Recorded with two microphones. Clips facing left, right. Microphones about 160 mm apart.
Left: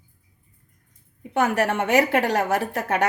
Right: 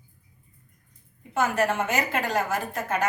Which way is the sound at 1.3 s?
65° left (ahead or behind).